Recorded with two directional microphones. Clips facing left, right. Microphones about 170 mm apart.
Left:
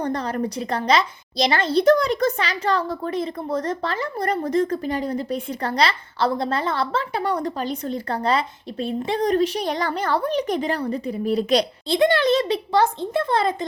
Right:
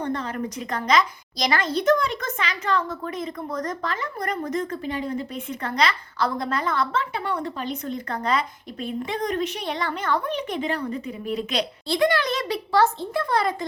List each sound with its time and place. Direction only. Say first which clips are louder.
0.0 s a woman's voice: left 3 dB; 40° left (ahead or behind)
11.9 s a child's voice: left 4 dB; 25° left (ahead or behind)